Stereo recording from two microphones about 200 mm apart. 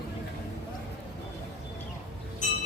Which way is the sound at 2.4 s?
35° left (ahead or behind).